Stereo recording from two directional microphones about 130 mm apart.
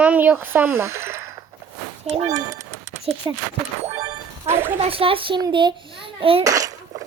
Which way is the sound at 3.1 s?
45° right (ahead or behind).